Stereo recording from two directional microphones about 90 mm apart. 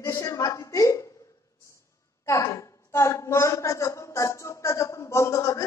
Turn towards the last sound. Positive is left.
turn(degrees=35)  # may be behind; listen again after turning